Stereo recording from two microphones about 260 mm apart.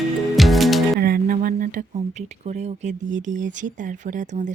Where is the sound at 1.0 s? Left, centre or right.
Right.